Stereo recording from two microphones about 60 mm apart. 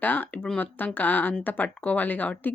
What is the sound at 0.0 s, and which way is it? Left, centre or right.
Speech, left.